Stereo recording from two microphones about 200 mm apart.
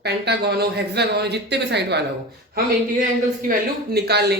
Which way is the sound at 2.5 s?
45° right (ahead or behind).